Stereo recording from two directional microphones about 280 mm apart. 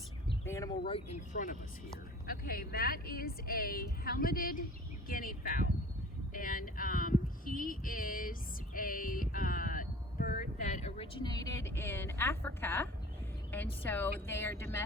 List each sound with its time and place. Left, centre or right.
0.3 s speech: centre; by 4.6 s left
5.0 s a sound: left; by 12.9 s centre
13.5 s speech: centre